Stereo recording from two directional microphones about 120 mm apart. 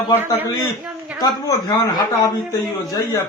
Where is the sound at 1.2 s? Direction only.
30° left (ahead or behind).